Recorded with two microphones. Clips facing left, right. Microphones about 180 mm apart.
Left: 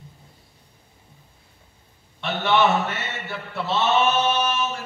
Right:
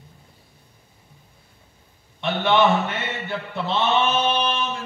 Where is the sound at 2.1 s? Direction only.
15° right (ahead or behind).